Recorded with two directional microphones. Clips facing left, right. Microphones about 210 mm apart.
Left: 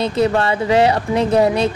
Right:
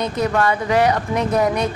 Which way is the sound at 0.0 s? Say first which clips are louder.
Left 3 dB; 30° left (ahead or behind).